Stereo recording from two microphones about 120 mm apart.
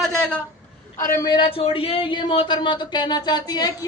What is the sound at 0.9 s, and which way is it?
Speech, 25° left (ahead or behind).